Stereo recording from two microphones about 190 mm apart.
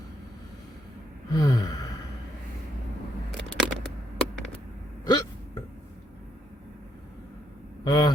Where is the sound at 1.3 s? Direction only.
20° left (ahead or behind).